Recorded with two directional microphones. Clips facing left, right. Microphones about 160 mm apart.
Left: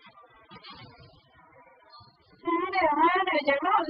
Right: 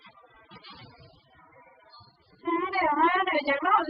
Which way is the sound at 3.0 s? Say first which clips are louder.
Even; 20° left (ahead or behind).